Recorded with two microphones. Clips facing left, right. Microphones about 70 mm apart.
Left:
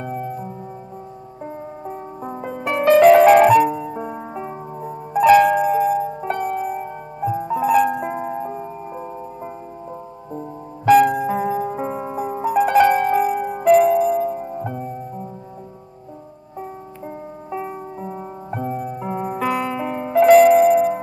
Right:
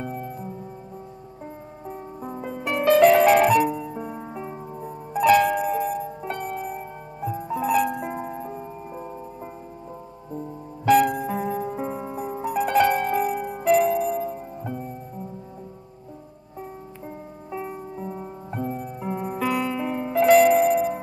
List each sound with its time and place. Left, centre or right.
1.4 s music: left
3.0 s music: centre
3.7 s music: left
4.8 s music: centre
10.9 s music: centre
11.8 s music: left
12.4 s music: centre
14.5 s music: left
17.6 s music: left
20.2 s music: centre